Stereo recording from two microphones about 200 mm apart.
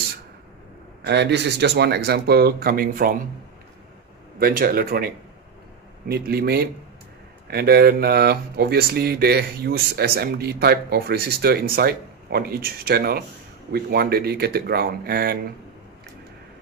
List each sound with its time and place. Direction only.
1.0 s speech: 60° right (ahead or behind)
4.4 s speech: 45° right (ahead or behind)